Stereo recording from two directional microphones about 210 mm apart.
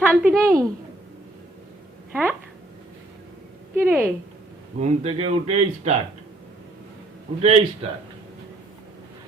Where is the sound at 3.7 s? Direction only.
10° right (ahead or behind).